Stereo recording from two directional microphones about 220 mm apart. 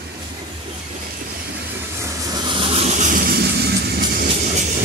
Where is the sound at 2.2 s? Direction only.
20° right (ahead or behind); by 4.3 s 45° right (ahead or behind).